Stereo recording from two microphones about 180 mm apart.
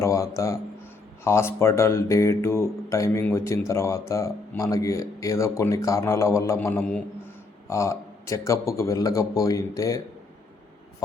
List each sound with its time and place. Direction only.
0.0 s speech: 15° left (ahead or behind)